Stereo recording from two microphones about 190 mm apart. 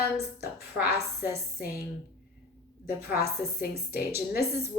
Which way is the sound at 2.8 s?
55° left (ahead or behind).